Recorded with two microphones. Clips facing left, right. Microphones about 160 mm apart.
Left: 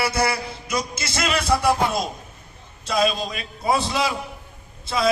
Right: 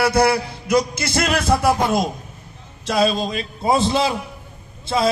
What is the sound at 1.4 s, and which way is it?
Music, centre (ahead or behind).